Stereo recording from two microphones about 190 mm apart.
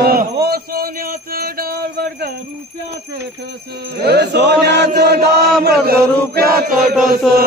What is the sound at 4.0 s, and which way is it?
Chant, 60° right (ahead or behind).